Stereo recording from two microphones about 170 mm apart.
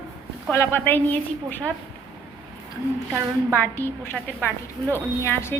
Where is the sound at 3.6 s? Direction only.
15° left (ahead or behind).